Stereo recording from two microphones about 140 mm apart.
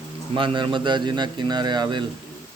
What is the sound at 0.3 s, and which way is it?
Speech, 35° right (ahead or behind).